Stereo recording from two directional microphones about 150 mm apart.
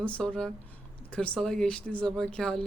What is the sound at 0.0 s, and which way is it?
Speech, 5° left (ahead or behind).